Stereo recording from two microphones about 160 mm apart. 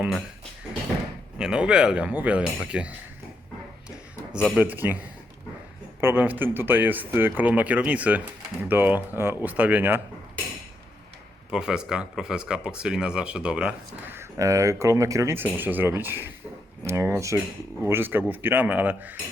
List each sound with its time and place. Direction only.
1.4 s speech: 5° right (ahead or behind)
3.8 s a sound: 5° right (ahead or behind)
4.6 s speech: 10° right (ahead or behind)
11.5 s speech: 5° right (ahead or behind)